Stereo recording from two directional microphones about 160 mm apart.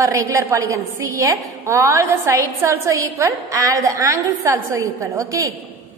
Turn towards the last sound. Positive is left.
turn(degrees=-20)  # may be behind; listen again after turning